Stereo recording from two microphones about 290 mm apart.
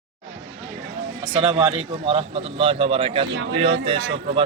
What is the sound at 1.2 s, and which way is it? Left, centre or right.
Speech, centre.